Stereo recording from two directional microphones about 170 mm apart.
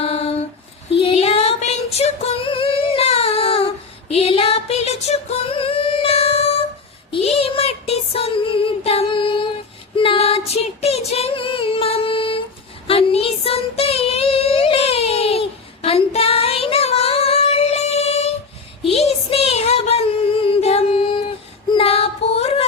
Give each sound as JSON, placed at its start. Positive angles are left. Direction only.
{"t": 0.0, "sound": "a sound", "side_deg": 35}
{"t": 0.9, "sound": "female singing", "side_deg": 35}
{"t": 7.1, "sound": "child singing", "side_deg": 35}
{"t": 10.0, "sound": "female singing", "side_deg": 35}
{"t": 12.9, "sound": "child singing", "side_deg": 35}
{"t": 18.9, "sound": "a sound", "side_deg": 35}
{"t": 21.7, "sound": "female singing", "side_deg": 35}